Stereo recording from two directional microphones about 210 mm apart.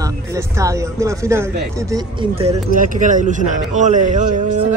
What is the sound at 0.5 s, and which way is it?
Speech, 15° right (ahead or behind).